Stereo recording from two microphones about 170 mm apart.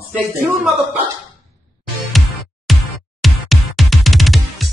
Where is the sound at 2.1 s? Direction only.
Centre (ahead or behind).